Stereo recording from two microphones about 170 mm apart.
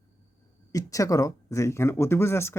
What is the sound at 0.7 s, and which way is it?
Speech, 20° left (ahead or behind).